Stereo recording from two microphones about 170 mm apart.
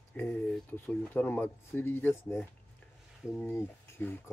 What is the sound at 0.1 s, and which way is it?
Speech, 10° left (ahead or behind).